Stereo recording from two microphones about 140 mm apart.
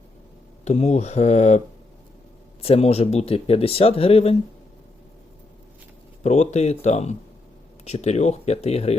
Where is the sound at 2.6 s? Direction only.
45° left (ahead or behind).